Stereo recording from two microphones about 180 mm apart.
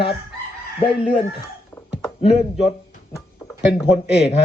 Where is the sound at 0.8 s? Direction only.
30° left (ahead or behind).